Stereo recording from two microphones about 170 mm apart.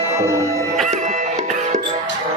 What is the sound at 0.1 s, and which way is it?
Speech, 15° right (ahead or behind).